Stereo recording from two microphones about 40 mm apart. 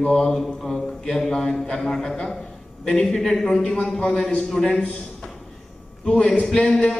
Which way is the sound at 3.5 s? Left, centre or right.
Left.